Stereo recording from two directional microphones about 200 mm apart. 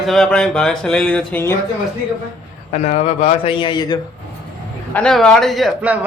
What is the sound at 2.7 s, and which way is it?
A man's voice, 35° left (ahead or behind).